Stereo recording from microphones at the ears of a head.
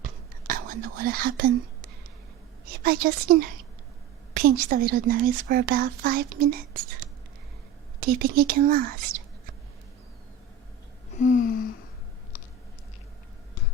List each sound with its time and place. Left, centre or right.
0.0 s whispering: right
2.6 s a woman's voice: right
11.1 s a sound: left